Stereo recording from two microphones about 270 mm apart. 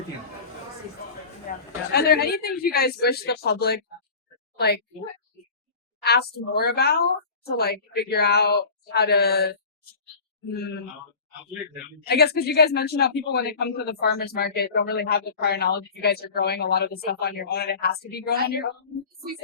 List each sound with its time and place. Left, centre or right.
1.5 s a sound: left
1.9 s a man's voice: left
6.0 s a man's voice: left
12.0 s a man's voice: left